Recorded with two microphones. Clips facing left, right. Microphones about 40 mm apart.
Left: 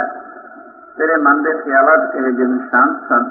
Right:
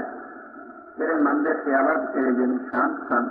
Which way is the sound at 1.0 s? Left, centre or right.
Left.